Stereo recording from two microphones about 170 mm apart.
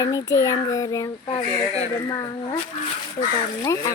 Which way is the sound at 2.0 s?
25° left (ahead or behind).